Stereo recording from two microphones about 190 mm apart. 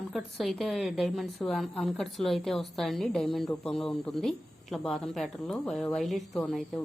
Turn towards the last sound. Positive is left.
turn(degrees=0)  # may be behind; listen again after turning